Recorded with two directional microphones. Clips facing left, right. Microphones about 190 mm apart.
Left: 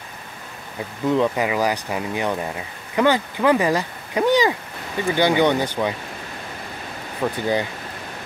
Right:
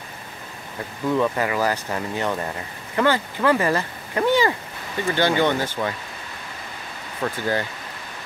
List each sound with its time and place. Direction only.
1.1 s speech: 15° left (ahead or behind)
7.2 s speech: 10° left (ahead or behind)